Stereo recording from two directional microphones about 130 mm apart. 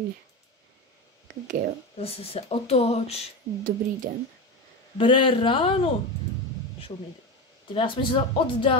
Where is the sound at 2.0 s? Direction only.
50° left (ahead or behind).